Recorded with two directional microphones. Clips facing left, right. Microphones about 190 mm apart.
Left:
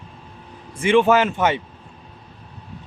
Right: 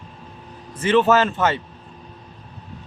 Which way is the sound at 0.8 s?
10° left (ahead or behind).